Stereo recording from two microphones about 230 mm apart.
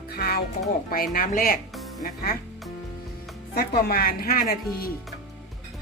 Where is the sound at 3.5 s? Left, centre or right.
Left.